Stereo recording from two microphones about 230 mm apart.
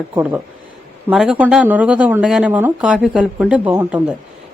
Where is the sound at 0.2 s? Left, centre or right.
Centre.